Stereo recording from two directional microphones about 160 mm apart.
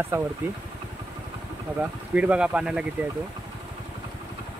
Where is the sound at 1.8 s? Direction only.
10° right (ahead or behind).